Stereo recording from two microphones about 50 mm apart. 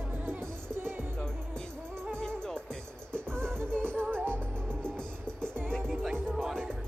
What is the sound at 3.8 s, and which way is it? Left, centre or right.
Music, right.